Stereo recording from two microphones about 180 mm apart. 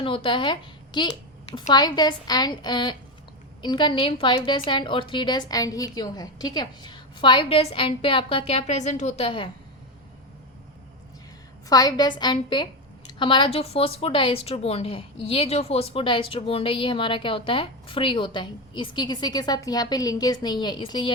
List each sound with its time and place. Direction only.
0.0 s a woman's voice: 30° left (ahead or behind)
11.7 s a woman's voice: 20° left (ahead or behind)